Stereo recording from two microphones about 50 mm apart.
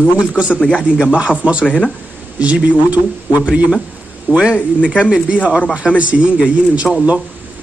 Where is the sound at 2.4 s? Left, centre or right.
Right.